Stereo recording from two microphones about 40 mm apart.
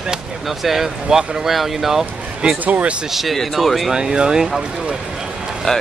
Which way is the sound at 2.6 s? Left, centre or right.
Right.